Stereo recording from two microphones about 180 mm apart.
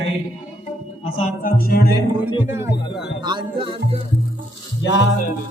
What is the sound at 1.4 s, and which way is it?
Speech, 60° left (ahead or behind).